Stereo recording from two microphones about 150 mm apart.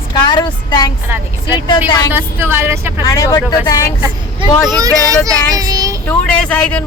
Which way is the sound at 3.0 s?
25° left (ahead or behind).